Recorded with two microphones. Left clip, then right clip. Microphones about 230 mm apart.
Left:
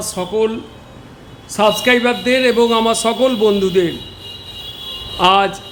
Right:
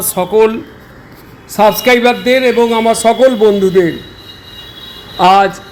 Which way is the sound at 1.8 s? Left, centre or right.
Centre.